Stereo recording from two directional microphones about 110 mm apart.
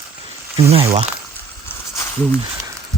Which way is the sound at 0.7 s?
60° right (ahead or behind).